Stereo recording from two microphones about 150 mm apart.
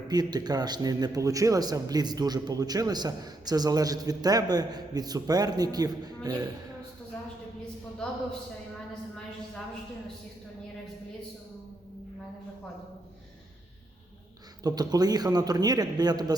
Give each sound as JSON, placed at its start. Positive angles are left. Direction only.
{"t": 0.1, "sound": "a man's voice", "side_deg": -25}
{"t": 14.6, "sound": "a man's voice", "side_deg": -25}